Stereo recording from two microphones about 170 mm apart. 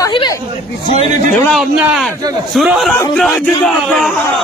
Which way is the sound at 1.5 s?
Centre (ahead or behind).